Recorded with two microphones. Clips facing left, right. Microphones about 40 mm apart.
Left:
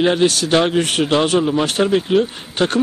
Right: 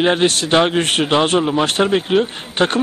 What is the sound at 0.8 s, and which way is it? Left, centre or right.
Speech, right.